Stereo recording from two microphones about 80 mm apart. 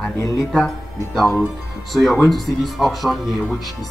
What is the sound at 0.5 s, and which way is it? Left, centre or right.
Speech, centre.